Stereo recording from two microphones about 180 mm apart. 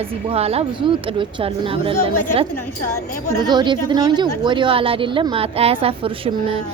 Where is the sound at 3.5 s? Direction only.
25° right (ahead or behind).